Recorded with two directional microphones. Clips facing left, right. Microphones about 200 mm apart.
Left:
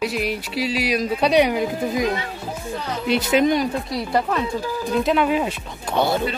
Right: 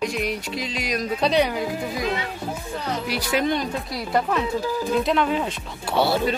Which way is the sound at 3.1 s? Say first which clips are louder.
Left 7 dB; 20° left (ahead or behind).